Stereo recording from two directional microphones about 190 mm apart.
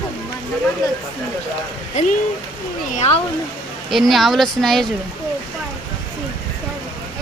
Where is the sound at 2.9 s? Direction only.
35° left (ahead or behind).